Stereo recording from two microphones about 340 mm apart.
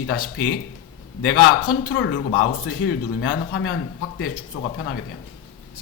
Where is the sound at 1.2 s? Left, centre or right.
Left.